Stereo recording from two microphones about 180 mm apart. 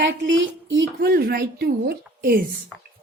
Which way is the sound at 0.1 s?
80° right.